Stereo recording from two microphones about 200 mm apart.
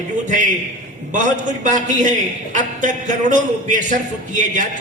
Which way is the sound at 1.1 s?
40° right (ahead or behind).